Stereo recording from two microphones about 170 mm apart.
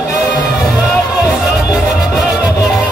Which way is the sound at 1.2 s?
5° right (ahead or behind).